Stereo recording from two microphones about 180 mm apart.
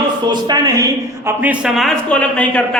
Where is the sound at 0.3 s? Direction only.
25° right (ahead or behind).